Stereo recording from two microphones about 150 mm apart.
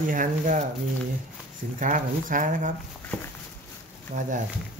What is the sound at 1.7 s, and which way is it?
Speech, 60° right (ahead or behind).